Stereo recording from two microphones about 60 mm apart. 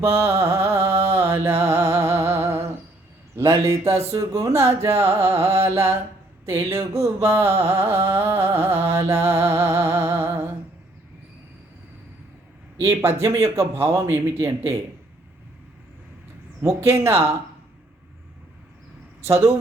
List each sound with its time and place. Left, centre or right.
0.0 s music: right
12.8 s music: right
16.6 s music: right
19.2 s music: right